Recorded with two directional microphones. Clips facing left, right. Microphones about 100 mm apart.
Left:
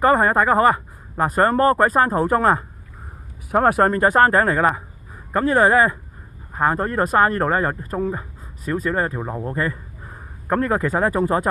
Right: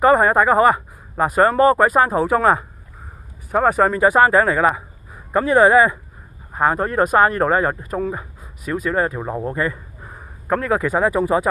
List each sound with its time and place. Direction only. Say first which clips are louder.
0.0 s speech: right 2 dB; 15° right (ahead or behind)
3.7 s a man's voice: right 1 dB; 5° right (ahead or behind)
9.4 s a sound: right 2 dB; 20° right (ahead or behind)
10.7 s speech: right 5 dB; 10° right (ahead or behind)